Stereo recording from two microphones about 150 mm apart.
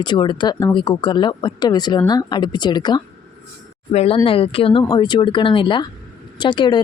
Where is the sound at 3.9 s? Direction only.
45° left (ahead or behind).